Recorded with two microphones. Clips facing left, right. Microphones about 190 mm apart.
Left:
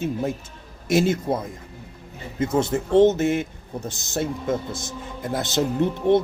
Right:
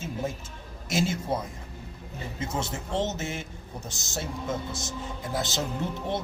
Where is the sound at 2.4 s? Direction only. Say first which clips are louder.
Left 11 dB; 55° left (ahead or behind).